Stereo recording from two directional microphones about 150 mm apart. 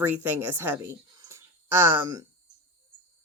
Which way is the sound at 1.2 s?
20° right (ahead or behind).